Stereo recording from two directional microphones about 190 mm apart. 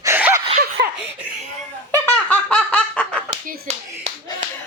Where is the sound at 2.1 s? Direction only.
5° left (ahead or behind).